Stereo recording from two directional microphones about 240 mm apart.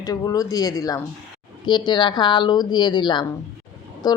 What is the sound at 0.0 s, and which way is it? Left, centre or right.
A woman's voice, centre.